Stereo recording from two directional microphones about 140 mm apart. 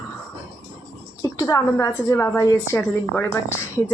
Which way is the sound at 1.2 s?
25° left (ahead or behind).